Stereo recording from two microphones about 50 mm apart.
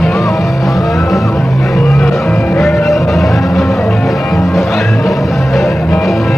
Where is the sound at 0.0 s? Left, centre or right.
Centre.